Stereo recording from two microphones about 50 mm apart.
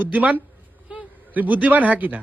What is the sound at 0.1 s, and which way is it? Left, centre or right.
A woman's voice, right.